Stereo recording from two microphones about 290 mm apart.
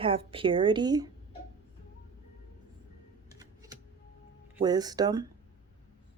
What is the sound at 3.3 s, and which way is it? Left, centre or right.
Typing, centre.